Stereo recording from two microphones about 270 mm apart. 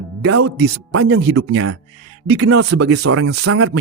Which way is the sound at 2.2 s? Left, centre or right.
Right.